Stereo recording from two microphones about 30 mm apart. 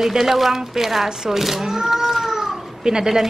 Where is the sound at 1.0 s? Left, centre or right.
Right.